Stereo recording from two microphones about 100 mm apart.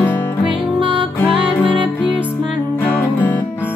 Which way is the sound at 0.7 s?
60° right (ahead or behind).